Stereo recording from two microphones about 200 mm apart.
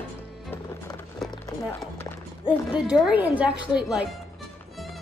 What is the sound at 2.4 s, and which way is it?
Speech, 5° right (ahead or behind).